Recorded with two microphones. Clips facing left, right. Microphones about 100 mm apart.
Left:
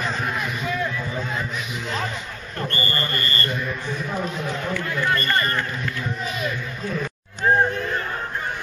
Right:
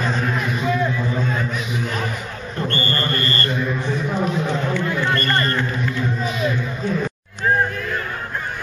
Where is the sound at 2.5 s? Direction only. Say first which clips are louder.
Right 3 dB; 25° right (ahead or behind).